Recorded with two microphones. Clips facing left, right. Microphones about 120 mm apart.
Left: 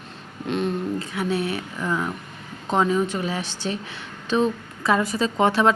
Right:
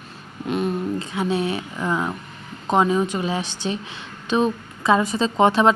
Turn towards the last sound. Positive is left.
turn(degrees=-20)  # may be behind; listen again after turning